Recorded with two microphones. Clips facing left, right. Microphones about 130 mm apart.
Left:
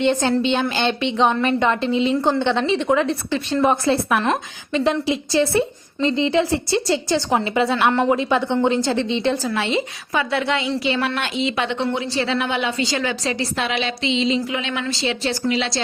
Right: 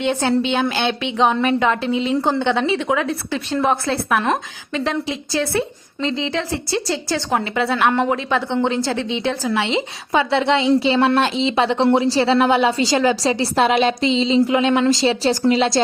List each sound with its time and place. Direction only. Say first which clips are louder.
0.0 s a woman's voice: even; 10° right (ahead or behind)
10.1 s a woman's voice: right 5 dB; 25° right (ahead or behind)
14.5 s a woman's voice: right 9 dB; 45° right (ahead or behind)